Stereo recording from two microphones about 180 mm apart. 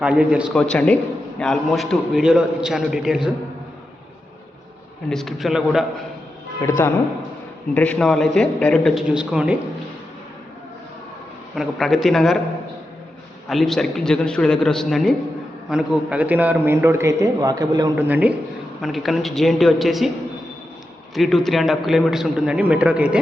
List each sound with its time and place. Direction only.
0.0 s a man's voice: 5° right (ahead or behind)
5.0 s a man's voice: centre (ahead or behind)
6.6 s a man's voice: 15° left (ahead or behind); by 9.6 s 5° right (ahead or behind)
11.5 s a man's voice: centre (ahead or behind)
13.5 s a man's voice: centre (ahead or behind); by 17.9 s 20° right (ahead or behind)
17.9 s a man's voice: 10° right (ahead or behind)
21.2 s a man's voice: centre (ahead or behind)